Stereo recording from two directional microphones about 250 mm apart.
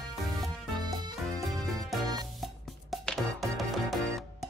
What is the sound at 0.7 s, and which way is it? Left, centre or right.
Music, centre.